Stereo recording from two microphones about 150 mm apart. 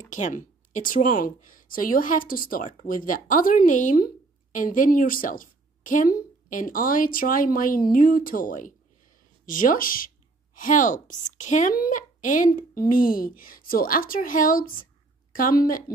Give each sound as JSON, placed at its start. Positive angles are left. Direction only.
{"t": 0.1, "sound": "speech", "side_deg": 60}